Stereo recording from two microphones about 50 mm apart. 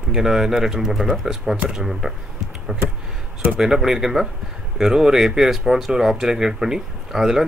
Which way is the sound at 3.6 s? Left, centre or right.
Centre.